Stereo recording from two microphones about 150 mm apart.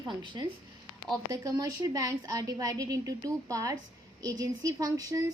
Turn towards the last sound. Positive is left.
turn(degrees=-25)  # may be behind; listen again after turning